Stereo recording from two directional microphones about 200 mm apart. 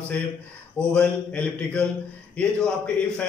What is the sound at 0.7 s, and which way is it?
Speech, 5° left (ahead or behind).